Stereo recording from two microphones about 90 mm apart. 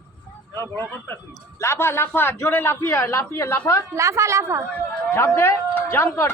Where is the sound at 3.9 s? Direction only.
30° right (ahead or behind).